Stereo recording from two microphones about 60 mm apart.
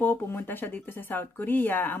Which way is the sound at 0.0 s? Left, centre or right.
Left.